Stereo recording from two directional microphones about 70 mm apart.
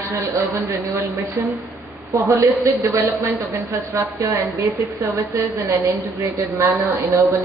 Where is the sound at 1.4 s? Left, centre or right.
Right.